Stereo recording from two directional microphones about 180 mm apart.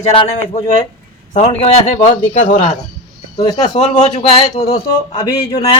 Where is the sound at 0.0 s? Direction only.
35° left (ahead or behind).